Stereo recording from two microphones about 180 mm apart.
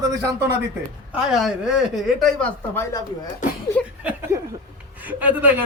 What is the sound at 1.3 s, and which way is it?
Speech, 5° right (ahead or behind).